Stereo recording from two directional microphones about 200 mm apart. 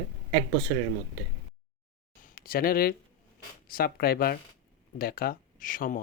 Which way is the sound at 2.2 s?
50° left (ahead or behind).